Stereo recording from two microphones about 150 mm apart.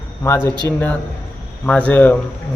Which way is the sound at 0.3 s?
20° left (ahead or behind).